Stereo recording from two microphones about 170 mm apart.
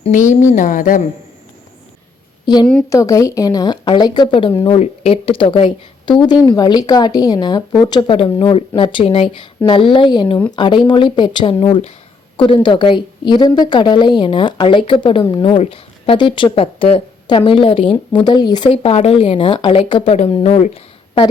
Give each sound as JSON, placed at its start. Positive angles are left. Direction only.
{"t": 0.0, "sound": "speech", "side_deg": 45}
{"t": 2.9, "sound": "a woman's voice", "side_deg": 20}
{"t": 18.7, "sound": "a woman's voice", "side_deg": 35}